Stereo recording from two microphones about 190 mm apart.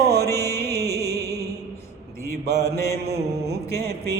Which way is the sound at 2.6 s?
15° left (ahead or behind).